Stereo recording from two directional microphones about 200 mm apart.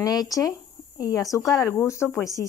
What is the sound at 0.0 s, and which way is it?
Speech, 20° left (ahead or behind).